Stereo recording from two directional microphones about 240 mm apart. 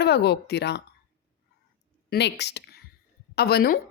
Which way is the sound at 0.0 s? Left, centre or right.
Left.